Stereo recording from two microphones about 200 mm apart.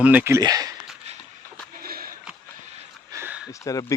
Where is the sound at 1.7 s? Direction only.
45° right (ahead or behind).